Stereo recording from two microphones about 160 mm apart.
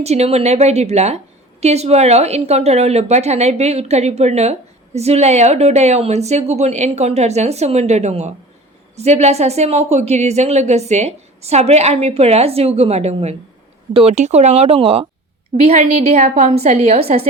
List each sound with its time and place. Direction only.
0.0 s a woman's voice: 40° right (ahead or behind)